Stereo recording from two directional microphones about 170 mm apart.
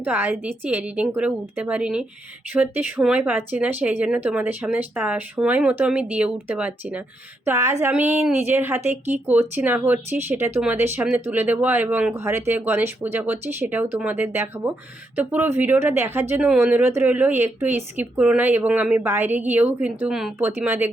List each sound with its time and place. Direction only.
0.0 s speech: 10° right (ahead or behind)
20.5 s speech: 15° right (ahead or behind)